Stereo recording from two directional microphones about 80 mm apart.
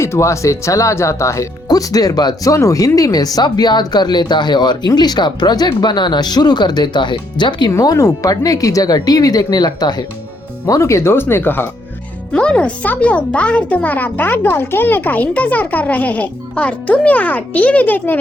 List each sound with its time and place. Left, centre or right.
0.0 s speech: left
7.8 s speech: left
10.7 s speech: left
12.3 s a child's voice: centre